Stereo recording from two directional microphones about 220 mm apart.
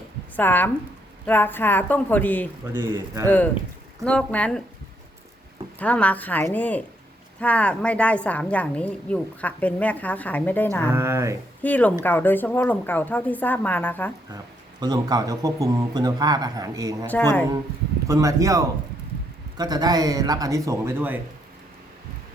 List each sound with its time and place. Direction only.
0.3 s a woman's voice: 10° left (ahead or behind)
2.7 s a man's voice: 10° right (ahead or behind)
3.2 s a woman's voice: 10° left (ahead or behind)
5.8 s a woman's voice: 5° left (ahead or behind)
10.9 s a man's voice: 10° right (ahead or behind)
11.6 s a woman's voice: 5° left (ahead or behind)
14.8 s a man's voice: 15° right (ahead or behind)
17.1 s a woman's voice: 10° left (ahead or behind)
18.1 s a man's voice: 15° right (ahead or behind)